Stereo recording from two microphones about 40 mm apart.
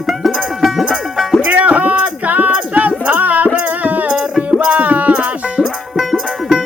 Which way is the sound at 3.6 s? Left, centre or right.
Right.